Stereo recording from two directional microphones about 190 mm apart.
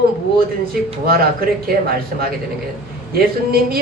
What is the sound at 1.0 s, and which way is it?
Speech, 50° right (ahead or behind).